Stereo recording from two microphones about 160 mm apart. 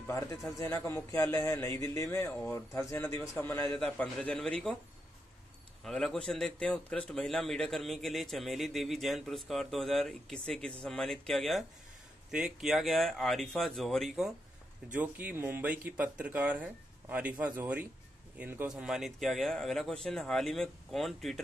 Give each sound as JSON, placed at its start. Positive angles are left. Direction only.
{"t": 0.6, "sound": "a man's voice", "side_deg": 15}
{"t": 5.9, "sound": "a man's voice", "side_deg": 0}